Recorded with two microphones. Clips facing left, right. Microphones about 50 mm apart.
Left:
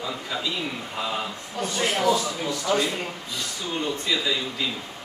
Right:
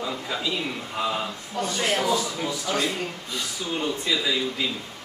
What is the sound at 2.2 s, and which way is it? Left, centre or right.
Speech, centre.